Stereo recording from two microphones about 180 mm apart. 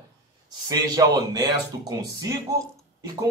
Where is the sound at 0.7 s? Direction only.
20° right (ahead or behind).